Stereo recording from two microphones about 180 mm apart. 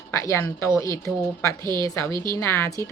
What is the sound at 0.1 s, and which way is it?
Speech, 15° left (ahead or behind).